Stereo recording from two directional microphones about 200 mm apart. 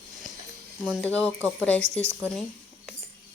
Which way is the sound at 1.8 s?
35° right (ahead or behind).